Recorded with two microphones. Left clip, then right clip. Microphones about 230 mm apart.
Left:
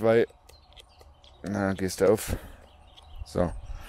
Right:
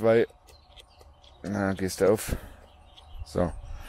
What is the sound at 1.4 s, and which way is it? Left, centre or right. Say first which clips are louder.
Speech: even; left.